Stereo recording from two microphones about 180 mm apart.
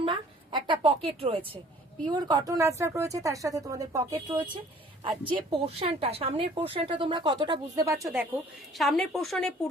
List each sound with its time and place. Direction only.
0.0 s a sound: 25° right (ahead or behind)
2.0 s speech: 25° right (ahead or behind)
8.7 s a woman's voice: centre (ahead or behind)